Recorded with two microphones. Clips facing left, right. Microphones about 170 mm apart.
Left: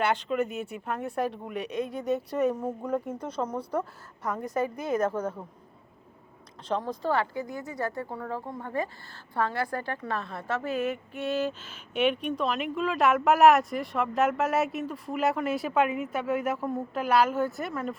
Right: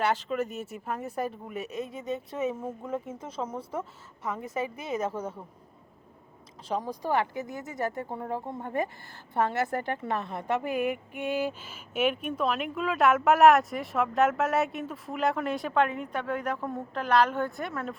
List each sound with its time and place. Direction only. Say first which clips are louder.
0.0 s a woman's voice: left 1 dB; centre (ahead or behind)
6.7 s a woman's voice: left 1 dB; 10° right (ahead or behind)